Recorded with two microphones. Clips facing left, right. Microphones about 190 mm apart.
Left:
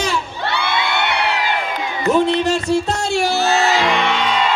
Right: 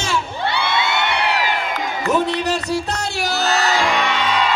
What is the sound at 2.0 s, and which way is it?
Music, 20° left (ahead or behind).